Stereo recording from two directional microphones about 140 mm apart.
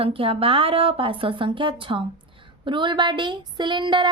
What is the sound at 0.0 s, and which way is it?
A woman's voice, 40° right (ahead or behind).